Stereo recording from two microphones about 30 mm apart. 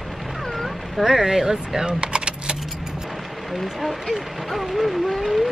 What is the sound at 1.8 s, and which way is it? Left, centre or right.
Keys jangling, right.